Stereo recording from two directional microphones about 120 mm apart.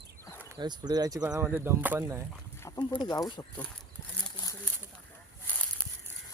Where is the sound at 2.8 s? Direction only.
35° left (ahead or behind).